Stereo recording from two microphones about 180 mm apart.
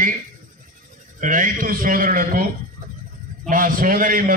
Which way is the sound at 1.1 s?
45° right (ahead or behind).